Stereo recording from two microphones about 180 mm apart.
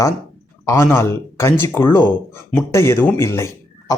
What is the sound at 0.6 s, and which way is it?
A man's voice, 15° left (ahead or behind).